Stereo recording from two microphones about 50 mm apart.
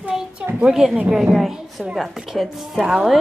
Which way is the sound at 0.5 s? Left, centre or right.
Centre.